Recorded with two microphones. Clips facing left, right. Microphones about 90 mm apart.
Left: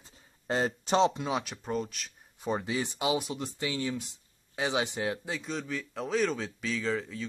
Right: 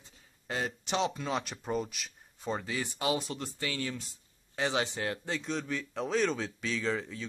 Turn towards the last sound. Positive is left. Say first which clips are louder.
# left 1 dB
turn(degrees=0)  # may be behind; listen again after turning